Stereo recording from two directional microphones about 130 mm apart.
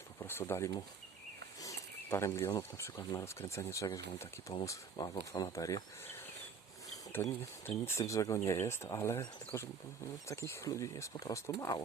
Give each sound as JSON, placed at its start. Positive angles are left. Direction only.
{"t": 0.2, "sound": "speech", "side_deg": 20}
{"t": 7.2, "sound": "speech", "side_deg": 15}
{"t": 7.9, "sound": "speech", "side_deg": 25}